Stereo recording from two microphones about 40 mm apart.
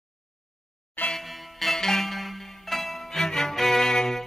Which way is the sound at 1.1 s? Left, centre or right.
Centre.